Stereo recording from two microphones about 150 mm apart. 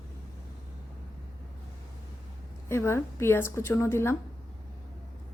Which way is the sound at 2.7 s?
15° left (ahead or behind).